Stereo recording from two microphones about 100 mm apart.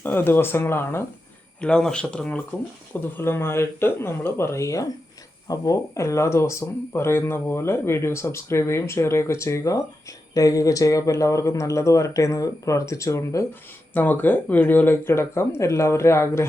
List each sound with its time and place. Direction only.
0.0 s speech: 20° left (ahead or behind)
1.6 s speech: 10° left (ahead or behind)
3.2 s speech: 25° left (ahead or behind)
13.9 s speech: 20° left (ahead or behind)